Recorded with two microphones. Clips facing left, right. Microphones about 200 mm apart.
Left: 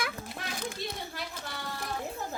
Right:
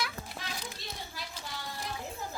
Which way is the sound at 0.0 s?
55° left (ahead or behind).